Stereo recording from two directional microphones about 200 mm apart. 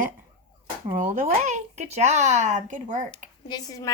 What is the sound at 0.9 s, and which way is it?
Speech, 45° right (ahead or behind).